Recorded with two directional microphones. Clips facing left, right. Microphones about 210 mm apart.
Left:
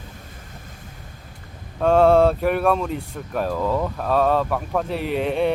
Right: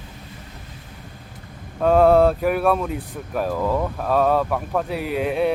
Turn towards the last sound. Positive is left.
turn(degrees=-5)  # may be behind; listen again after turning